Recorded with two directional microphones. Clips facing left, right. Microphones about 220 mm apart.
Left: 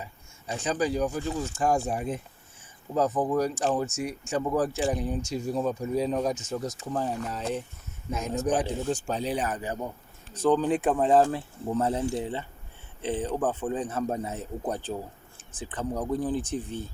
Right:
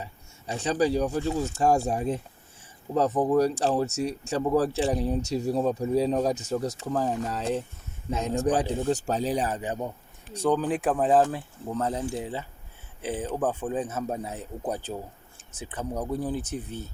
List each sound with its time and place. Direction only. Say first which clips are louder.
0.0 s speech: right 2 dB; 35° right (ahead or behind)
9.5 s speech: right 1 dB; 20° right (ahead or behind)
10.3 s a man's voice: left 1 dB; 10° right (ahead or behind)